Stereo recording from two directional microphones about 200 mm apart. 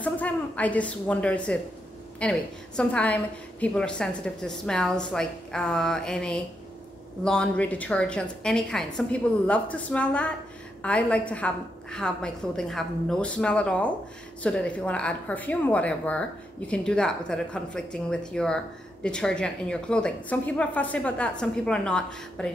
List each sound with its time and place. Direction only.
0.0 s a woman's voice: 5° left (ahead or behind)